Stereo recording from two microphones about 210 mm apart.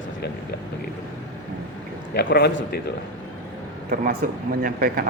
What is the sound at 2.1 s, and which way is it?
Speech, 50° left (ahead or behind).